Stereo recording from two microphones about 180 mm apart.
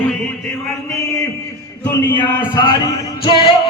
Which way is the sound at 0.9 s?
15° left (ahead or behind).